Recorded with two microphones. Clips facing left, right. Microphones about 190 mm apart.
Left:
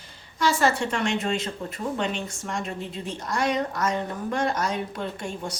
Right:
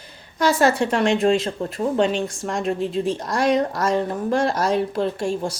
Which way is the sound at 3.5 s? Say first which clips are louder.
Right 6 dB; 35° right (ahead or behind).